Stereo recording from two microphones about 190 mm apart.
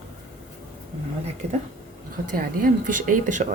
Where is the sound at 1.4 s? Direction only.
35° right (ahead or behind).